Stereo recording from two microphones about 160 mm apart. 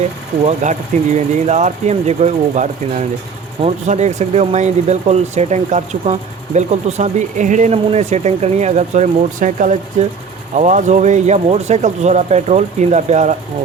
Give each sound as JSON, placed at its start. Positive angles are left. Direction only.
{"t": 0.4, "sound": "speech", "side_deg": -45}